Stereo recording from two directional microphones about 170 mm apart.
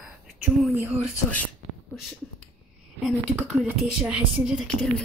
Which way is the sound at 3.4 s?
5° right (ahead or behind).